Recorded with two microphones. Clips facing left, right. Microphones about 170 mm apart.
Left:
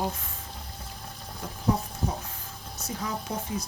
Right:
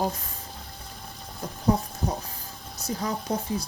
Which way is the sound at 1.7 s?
35° right (ahead or behind).